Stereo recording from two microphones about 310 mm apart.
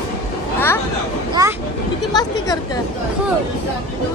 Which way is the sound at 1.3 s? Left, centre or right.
Centre.